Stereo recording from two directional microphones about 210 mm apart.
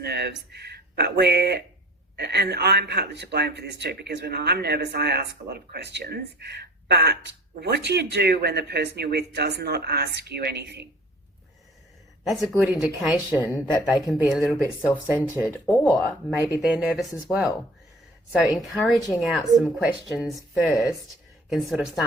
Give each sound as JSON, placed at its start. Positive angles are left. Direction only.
{"t": 0.0, "sound": "speech", "side_deg": -50}
{"t": 12.2, "sound": "a woman's voice", "side_deg": 0}
{"t": 13.5, "sound": "speech", "side_deg": 15}
{"t": 13.8, "sound": "a woman's voice", "side_deg": 0}